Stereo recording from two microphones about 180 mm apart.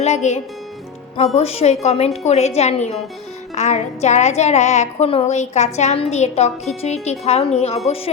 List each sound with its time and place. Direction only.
0.0 s a woman's voice: 40° left (ahead or behind)